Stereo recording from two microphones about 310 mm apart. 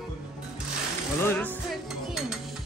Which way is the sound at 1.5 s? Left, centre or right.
Centre.